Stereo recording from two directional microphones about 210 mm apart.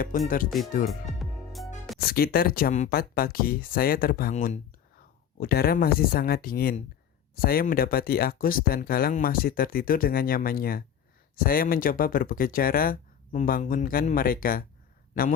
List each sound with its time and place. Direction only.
0.1 s a man's voice: 40° left (ahead or behind)
0.9 s music: centre (ahead or behind)
2.0 s a man's voice: 45° left (ahead or behind)